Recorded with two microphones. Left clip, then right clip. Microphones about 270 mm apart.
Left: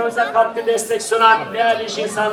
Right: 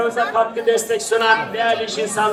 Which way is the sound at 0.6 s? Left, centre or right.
Centre.